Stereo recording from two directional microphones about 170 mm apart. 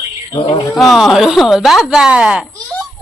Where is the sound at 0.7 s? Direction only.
Centre (ahead or behind).